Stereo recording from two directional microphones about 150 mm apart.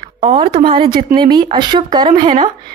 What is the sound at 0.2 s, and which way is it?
A woman's voice, 35° right (ahead or behind).